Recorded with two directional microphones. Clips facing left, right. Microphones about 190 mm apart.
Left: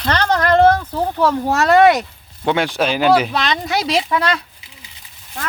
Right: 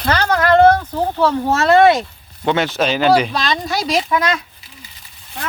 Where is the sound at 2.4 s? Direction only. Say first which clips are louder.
Even; 10° left (ahead or behind).